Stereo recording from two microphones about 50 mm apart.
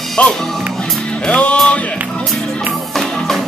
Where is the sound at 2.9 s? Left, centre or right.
Centre.